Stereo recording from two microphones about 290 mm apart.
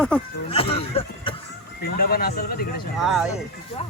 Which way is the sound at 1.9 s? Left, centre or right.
Left.